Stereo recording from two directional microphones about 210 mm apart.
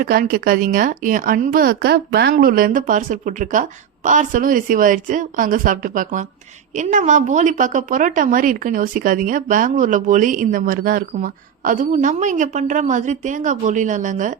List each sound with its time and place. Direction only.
0.0 s a woman's voice: 45° right (ahead or behind)